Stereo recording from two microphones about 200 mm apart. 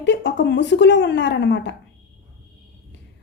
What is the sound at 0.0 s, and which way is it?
A woman's voice, 65° left (ahead or behind).